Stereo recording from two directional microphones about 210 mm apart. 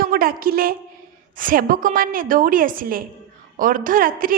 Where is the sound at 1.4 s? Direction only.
40° right (ahead or behind).